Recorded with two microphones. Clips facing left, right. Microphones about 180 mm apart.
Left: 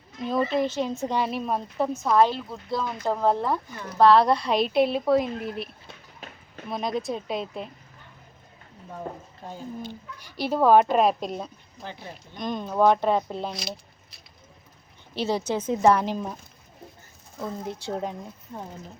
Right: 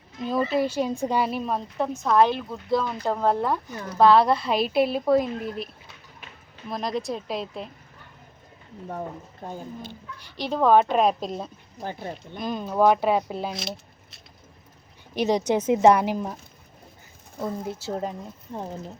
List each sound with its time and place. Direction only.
0.3 s a woman's voice: 5° right (ahead or behind)
6.7 s a woman's voice: centre (ahead or behind)
9.4 s speech: 55° right (ahead or behind)
10.2 s a woman's voice: 10° left (ahead or behind)
11.8 s speech: 50° right (ahead or behind)
12.4 s a woman's voice: 5° right (ahead or behind)
15.1 s speech: 15° right (ahead or behind)
17.7 s a woman's voice: 5° right (ahead or behind)
18.5 s speech: 30° right (ahead or behind)